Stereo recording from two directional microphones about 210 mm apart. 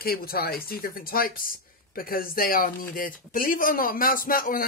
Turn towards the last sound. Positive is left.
turn(degrees=40)  # may be behind; listen again after turning